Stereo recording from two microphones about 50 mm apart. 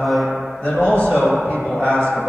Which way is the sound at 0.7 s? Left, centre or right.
Left.